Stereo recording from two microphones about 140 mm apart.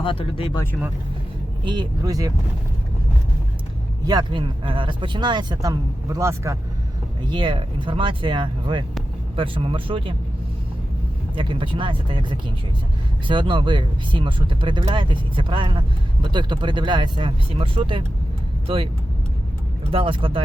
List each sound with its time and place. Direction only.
0.0 s speech: 40° left (ahead or behind)
1.6 s speech: 30° right (ahead or behind)
4.0 s speech: 30° right (ahead or behind)
7.3 s speech: 35° right (ahead or behind)
11.3 s speech: 35° right (ahead or behind)
19.9 s speech: 35° right (ahead or behind)